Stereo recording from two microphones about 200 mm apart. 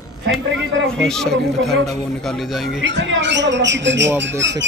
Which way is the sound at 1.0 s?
Centre (ahead or behind).